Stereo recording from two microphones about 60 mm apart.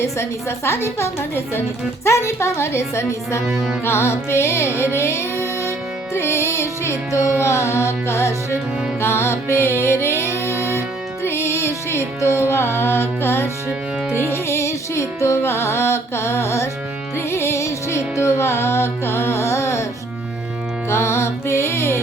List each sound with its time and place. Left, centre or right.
0.0 s music: left
3.4 s music: centre
3.8 s music: left
20.9 s music: left